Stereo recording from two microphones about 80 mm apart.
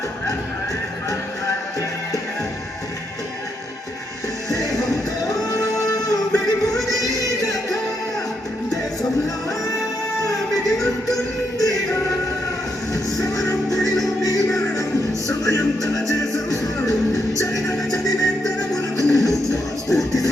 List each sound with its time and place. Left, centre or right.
4.4 s music: left
10.8 s music: left
12.9 s music: left